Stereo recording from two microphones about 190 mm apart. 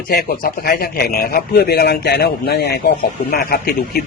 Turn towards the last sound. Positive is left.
turn(degrees=55)  # may be behind; listen again after turning